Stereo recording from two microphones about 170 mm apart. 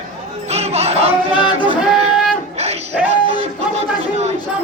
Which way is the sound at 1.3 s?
30° left (ahead or behind).